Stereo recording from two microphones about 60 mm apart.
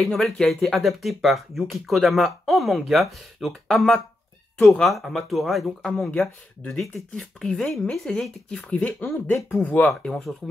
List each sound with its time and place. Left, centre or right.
0.0 s speech: centre
5.9 s speech: centre
8.6 s speech: left
10.0 s speech: centre